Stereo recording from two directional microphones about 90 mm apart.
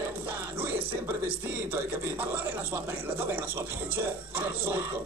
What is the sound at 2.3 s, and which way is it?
Speech, 25° right (ahead or behind).